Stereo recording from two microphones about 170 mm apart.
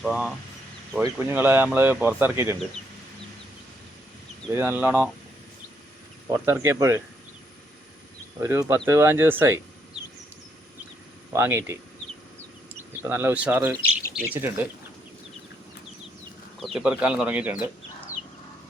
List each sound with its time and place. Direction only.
0.0 s speech: centre (ahead or behind)
4.5 s speech: 10° right (ahead or behind)
6.2 s speech: 15° right (ahead or behind)
8.4 s speech: 15° right (ahead or behind)
11.3 s speech: 15° right (ahead or behind)
13.0 s speech: 10° right (ahead or behind)
16.6 s speech: centre (ahead or behind)